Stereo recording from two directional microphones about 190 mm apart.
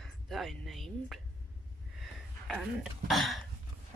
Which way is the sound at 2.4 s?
Centre (ahead or behind).